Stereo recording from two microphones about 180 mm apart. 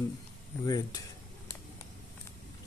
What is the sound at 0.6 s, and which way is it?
Speech, 20° left (ahead or behind).